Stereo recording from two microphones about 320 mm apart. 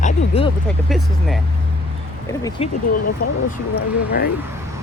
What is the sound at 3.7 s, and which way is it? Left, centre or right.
Speech, left.